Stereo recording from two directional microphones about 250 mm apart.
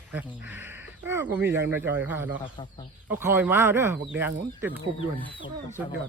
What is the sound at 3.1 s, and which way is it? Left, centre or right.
Speech, centre.